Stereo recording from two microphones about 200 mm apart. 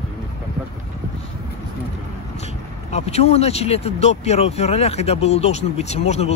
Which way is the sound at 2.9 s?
30° left (ahead or behind).